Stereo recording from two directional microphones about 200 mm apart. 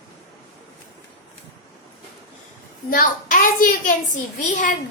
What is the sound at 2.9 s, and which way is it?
A child's voice, 45° left (ahead or behind).